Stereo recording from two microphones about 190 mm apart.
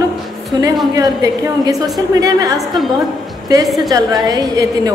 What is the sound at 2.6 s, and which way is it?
A woman's voice, centre (ahead or behind).